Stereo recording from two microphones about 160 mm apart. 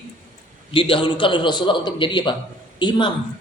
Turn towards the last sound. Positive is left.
turn(degrees=30)  # may be behind; listen again after turning